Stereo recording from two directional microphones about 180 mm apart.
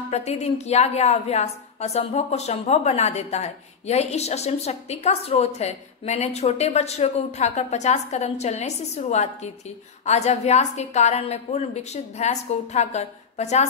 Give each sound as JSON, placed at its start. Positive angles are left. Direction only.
{"t": 0.1, "sound": "a woman's voice", "side_deg": 35}